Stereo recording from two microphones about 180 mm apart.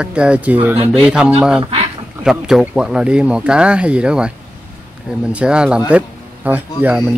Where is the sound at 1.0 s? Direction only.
5° right (ahead or behind).